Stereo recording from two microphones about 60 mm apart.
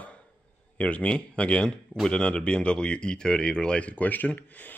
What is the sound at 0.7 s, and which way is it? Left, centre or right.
Speech, left.